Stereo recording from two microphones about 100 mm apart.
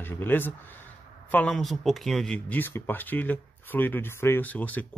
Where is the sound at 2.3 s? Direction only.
20° left (ahead or behind).